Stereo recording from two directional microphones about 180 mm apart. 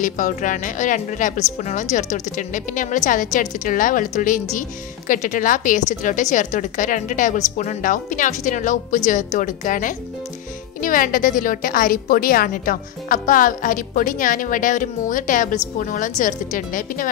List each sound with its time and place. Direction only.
0.0 s a woman's voice: 45° left (ahead or behind)